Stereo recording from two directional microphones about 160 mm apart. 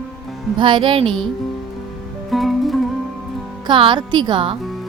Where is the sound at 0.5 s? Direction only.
30° right (ahead or behind).